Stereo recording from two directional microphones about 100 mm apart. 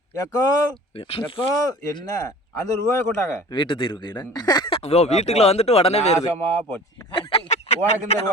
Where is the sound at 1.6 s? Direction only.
35° left (ahead or behind).